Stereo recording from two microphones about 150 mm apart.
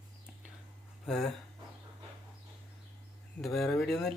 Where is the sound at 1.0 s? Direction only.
Centre (ahead or behind).